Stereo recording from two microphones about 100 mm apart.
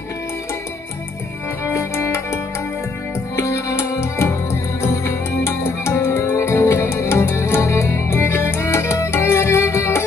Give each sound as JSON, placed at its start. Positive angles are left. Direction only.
{"t": 1.6, "sound": "music", "side_deg": 25}